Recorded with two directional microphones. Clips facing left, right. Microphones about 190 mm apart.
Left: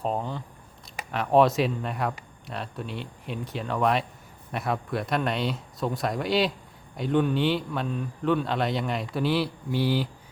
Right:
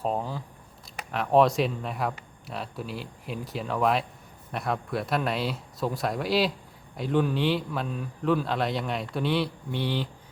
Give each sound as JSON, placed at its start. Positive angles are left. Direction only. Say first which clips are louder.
{"t": 0.0, "sound": "speech", "louder": "even", "side_deg": 0}